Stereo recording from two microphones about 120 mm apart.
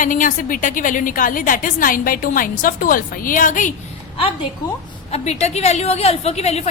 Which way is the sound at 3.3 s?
90° left.